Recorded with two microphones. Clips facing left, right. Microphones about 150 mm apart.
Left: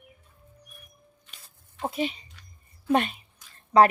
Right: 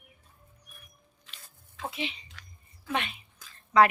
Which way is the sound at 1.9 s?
45° left (ahead or behind).